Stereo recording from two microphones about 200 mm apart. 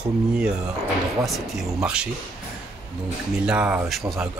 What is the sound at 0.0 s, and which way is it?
Speech, 5° right (ahead or behind).